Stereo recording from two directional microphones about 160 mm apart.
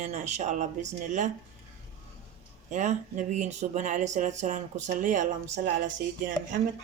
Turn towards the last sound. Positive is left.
turn(degrees=-60)  # may be behind; listen again after turning